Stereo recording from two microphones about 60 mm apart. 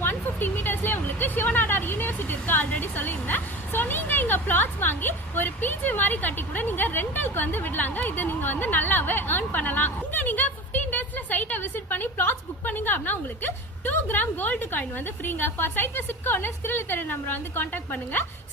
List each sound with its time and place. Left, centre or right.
0.0 s a woman's voice: left